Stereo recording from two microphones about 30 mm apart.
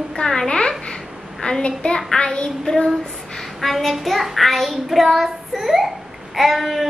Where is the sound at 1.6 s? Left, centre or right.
Left.